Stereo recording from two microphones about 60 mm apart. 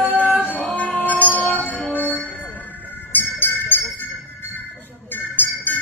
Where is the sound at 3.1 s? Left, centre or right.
Left.